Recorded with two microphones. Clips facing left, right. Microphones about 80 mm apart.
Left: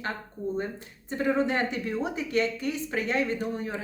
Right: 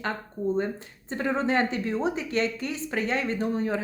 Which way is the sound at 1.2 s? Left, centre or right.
Right.